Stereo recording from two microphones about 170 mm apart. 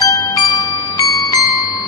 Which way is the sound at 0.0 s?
20° left (ahead or behind).